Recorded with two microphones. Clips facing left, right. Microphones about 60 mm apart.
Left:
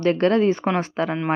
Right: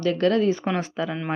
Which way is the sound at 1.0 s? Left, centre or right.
Left.